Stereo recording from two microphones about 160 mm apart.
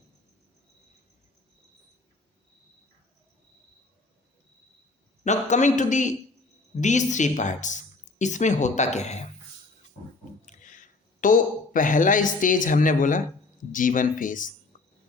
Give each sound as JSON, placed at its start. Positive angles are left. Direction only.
{"t": 5.2, "sound": "speech", "side_deg": 50}
{"t": 10.4, "sound": "speech", "side_deg": 50}